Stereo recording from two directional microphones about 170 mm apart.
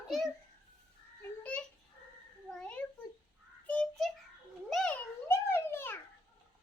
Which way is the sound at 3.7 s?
5° left (ahead or behind).